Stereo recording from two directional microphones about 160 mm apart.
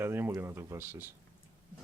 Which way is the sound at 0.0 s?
15° right (ahead or behind).